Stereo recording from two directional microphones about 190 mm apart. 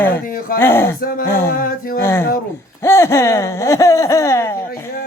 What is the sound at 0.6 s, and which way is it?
Speech, 10° left (ahead or behind).